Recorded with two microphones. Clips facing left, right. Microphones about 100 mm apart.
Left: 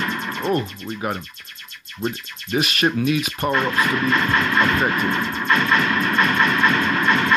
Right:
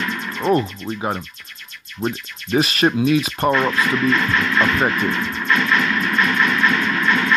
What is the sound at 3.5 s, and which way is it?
Speech, 35° left (ahead or behind).